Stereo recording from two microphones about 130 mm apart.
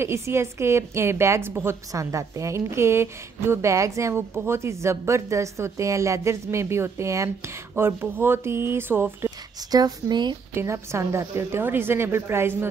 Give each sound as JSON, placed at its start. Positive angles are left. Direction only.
{"t": 0.0, "sound": "a woman's voice", "side_deg": -20}
{"t": 9.6, "sound": "a woman's voice", "side_deg": -30}
{"t": 10.5, "sound": "a woman's voice", "side_deg": -20}